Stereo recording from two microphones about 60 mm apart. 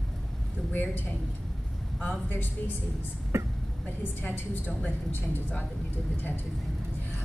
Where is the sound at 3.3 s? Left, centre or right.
Right.